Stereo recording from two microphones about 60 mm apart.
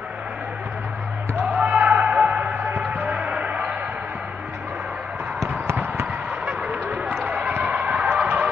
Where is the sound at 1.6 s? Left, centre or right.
Right.